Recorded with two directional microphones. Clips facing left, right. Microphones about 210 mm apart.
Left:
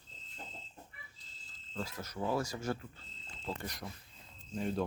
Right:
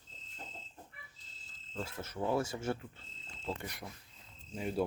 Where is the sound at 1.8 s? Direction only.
25° right (ahead or behind).